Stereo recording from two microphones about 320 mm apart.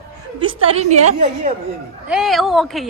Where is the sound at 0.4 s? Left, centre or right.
Centre.